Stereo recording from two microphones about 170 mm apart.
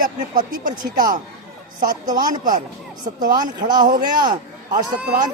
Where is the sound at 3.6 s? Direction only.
55° right (ahead or behind).